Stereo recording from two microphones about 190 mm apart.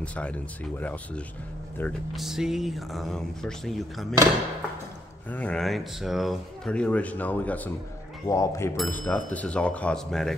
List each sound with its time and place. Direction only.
0.0 s speech: 5° left (ahead or behind)
5.3 s speech: 5° left (ahead or behind)
8.7 s speech: 5° left (ahead or behind)